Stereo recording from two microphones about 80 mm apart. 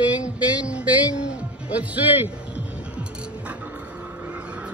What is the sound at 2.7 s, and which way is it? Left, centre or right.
Music, centre.